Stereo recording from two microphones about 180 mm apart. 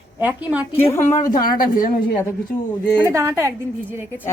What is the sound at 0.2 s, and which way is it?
Speech, 10° right (ahead or behind).